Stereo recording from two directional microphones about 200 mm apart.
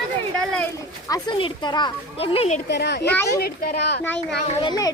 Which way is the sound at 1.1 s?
25° left (ahead or behind).